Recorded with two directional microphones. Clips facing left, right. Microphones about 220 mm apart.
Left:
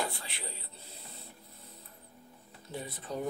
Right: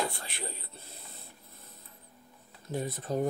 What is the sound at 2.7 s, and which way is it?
Speech, 45° right (ahead or behind).